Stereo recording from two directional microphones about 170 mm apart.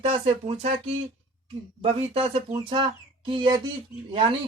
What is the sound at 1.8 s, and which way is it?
Speech, 35° right (ahead or behind).